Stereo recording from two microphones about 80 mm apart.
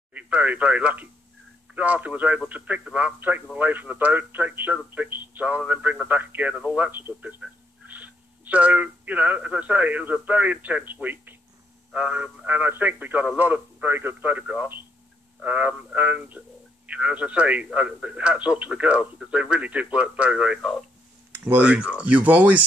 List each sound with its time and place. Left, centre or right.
0.1 s a man's voice: centre